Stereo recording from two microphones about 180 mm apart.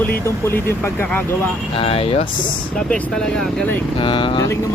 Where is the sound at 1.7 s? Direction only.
30° left (ahead or behind).